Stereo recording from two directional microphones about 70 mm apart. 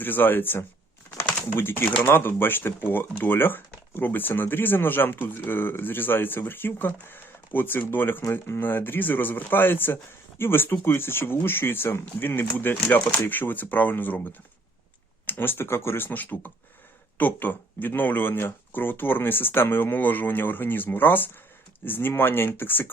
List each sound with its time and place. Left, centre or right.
0.0 s speech: left
15.3 s speech: left